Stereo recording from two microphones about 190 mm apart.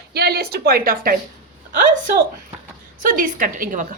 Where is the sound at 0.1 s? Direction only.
55° right (ahead or behind).